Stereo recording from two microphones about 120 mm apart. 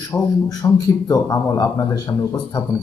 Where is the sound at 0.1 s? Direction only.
30° left (ahead or behind).